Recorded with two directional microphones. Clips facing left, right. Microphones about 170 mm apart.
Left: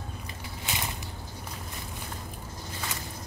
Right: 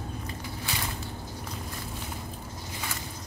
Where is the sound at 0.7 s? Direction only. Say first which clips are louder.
Left 1 dB; 20° left (ahead or behind).